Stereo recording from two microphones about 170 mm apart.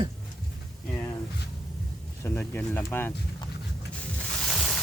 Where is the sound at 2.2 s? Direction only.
15° left (ahead or behind).